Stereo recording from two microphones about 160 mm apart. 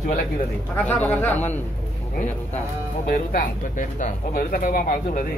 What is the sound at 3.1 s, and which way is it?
Speech, 60° left (ahead or behind).